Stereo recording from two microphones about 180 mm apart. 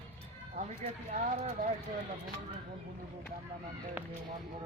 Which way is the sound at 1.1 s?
45° right (ahead or behind).